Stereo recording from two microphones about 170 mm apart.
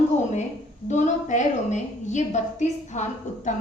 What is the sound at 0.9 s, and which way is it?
A woman's voice, 45° left (ahead or behind).